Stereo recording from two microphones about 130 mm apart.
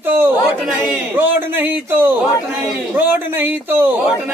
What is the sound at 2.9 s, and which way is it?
Speech, 15° right (ahead or behind).